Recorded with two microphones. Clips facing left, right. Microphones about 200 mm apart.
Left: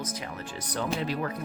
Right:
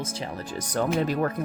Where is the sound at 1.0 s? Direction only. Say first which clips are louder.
Right 5 dB; 45° right (ahead or behind).